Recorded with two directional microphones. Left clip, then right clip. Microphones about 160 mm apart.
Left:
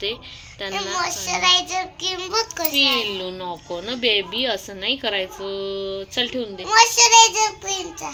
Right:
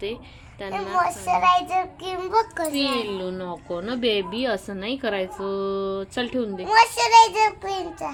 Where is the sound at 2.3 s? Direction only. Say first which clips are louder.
Right 5 dB; 60° right (ahead or behind).